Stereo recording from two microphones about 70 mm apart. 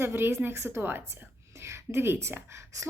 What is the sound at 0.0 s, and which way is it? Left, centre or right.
A woman's voice, right.